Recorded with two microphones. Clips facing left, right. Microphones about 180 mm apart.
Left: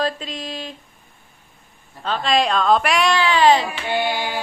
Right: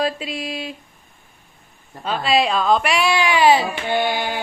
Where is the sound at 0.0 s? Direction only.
10° right (ahead or behind).